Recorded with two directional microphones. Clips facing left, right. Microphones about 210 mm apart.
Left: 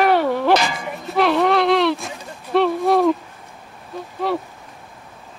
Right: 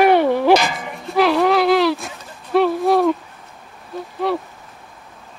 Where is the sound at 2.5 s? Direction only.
Centre (ahead or behind).